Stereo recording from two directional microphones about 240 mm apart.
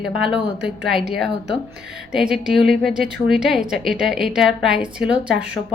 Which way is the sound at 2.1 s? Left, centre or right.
Centre.